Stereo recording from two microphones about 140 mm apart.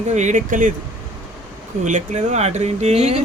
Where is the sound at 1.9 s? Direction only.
60° right (ahead or behind).